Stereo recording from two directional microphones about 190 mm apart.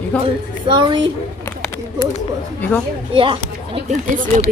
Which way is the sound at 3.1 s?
25° right (ahead or behind).